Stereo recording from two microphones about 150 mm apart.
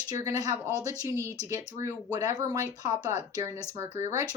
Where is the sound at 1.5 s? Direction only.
20° right (ahead or behind).